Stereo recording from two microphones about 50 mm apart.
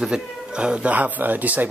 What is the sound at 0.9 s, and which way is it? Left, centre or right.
Speech, right.